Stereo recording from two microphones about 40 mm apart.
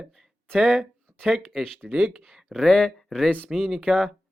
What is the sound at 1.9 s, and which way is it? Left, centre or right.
Speech, centre.